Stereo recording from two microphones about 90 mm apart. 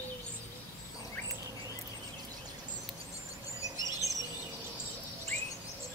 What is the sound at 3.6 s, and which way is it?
Chirp, 40° left (ahead or behind).